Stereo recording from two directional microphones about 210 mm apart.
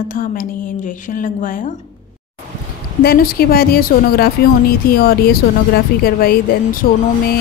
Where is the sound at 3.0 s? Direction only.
45° left (ahead or behind).